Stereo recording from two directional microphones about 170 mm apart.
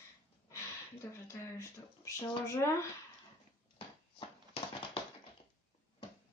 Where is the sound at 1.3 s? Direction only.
20° left (ahead or behind).